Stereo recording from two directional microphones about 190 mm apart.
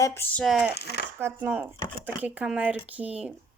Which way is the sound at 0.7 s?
60° left (ahead or behind).